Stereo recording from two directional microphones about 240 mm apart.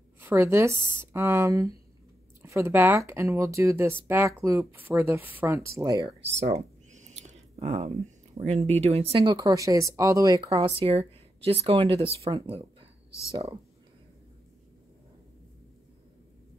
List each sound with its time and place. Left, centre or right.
0.2 s a woman's voice: centre
6.2 s a sound: right
8.4 s speech: right